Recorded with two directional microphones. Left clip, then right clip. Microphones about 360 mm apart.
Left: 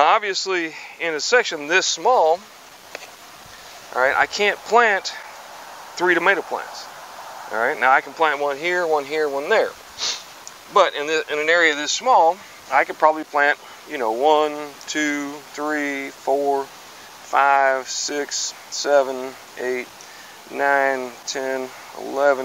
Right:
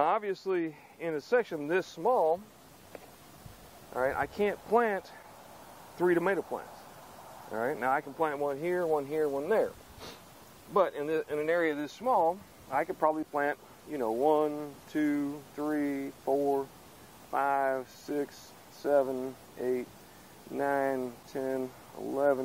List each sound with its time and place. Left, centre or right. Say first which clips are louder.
0.0 s speech: left 12 dB; centre
2.0 s speech: left 10 dB; centre
3.9 s speech: left 13 dB; centre
16.3 s speech: left 9 dB; centre
17.3 s speech: left 13 dB; centre